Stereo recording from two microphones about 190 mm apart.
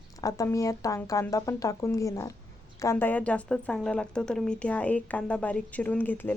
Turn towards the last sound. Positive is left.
turn(degrees=10)  # may be behind; listen again after turning